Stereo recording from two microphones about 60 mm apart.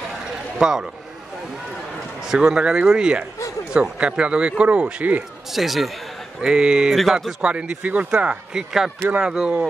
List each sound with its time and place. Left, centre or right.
0.1 s a sound: centre
2.2 s a man's voice: centre
5.5 s a man's voice: centre
7.4 s speech: centre
8.1 s a man's voice: centre